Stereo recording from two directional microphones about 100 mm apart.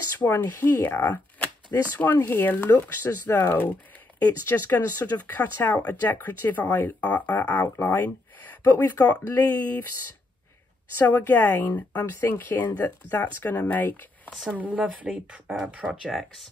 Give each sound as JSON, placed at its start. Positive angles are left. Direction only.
{"t": 0.4, "sound": "speech", "side_deg": 20}
{"t": 11.0, "sound": "speech", "side_deg": 15}
{"t": 14.5, "sound": "speech", "side_deg": -15}